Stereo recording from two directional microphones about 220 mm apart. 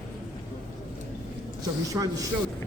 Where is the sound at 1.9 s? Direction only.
15° right (ahead or behind).